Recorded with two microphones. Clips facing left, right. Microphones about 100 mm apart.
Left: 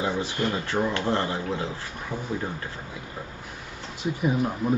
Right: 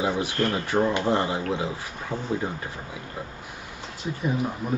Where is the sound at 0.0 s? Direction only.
15° right (ahead or behind).